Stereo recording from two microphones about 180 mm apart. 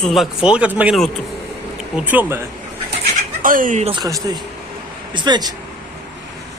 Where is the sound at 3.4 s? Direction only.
50° right (ahead or behind).